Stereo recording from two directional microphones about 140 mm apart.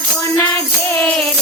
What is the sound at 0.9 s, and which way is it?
Music, 5° left (ahead or behind).